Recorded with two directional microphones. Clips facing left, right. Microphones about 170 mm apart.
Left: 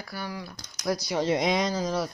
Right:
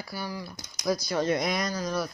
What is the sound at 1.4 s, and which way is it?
Speech, 90° left.